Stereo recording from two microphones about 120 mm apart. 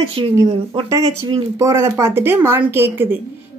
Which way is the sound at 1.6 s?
25° right (ahead or behind).